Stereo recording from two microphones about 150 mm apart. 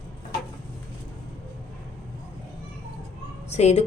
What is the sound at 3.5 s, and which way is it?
Speech, 45° left (ahead or behind).